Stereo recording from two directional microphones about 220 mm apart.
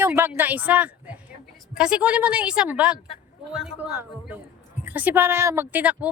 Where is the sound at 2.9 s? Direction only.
25° left (ahead or behind).